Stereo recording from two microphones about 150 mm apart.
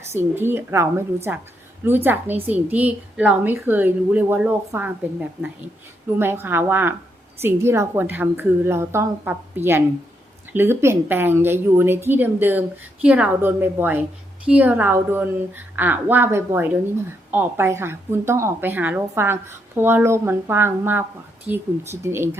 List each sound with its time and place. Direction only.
0.1 s a woman's voice: 15° right (ahead or behind)